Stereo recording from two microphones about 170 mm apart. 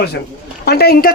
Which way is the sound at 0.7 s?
65° left (ahead or behind).